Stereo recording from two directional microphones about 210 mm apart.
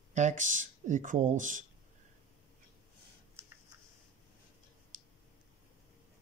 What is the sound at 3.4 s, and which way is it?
Typing, 10° right (ahead or behind).